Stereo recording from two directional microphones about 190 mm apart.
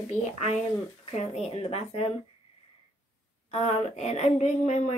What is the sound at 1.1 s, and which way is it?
Speech, 35° left (ahead or behind).